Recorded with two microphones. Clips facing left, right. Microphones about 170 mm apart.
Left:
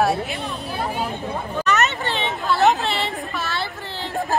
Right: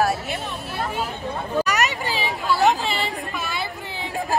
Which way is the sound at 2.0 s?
Centre (ahead or behind).